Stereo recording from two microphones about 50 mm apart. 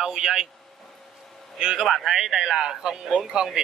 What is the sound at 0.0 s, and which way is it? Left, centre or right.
Speech, centre.